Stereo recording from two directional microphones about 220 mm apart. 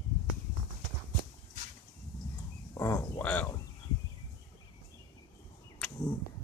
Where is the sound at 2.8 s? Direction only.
10° left (ahead or behind).